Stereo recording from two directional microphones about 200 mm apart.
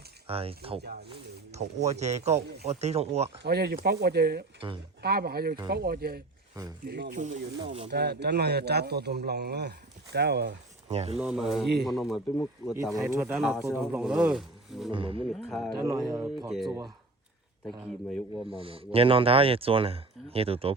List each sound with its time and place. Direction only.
0.3 s speech: 30° right (ahead or behind)
3.4 s speech: 55° right (ahead or behind)
7.6 s speech: 30° right (ahead or behind)
7.9 s speech: 55° right (ahead or behind)
10.8 s speech: 30° right (ahead or behind)
11.2 s speech: centre (ahead or behind)
13.1 s speech: 10° right (ahead or behind)
14.9 s speech: 25° right (ahead or behind)
15.3 s speech: centre (ahead or behind)
15.7 s speech: 15° right (ahead or behind)
16.5 s speech: centre (ahead or behind)
18.5 s speech: 25° right (ahead or behind)